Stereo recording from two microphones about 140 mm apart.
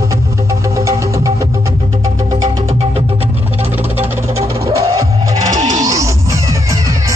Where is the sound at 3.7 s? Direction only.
15° right (ahead or behind).